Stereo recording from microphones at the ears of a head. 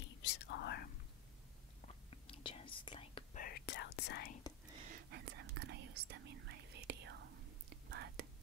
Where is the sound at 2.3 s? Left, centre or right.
Left.